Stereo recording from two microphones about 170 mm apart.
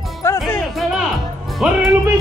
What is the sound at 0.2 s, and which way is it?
Music, 15° left (ahead or behind).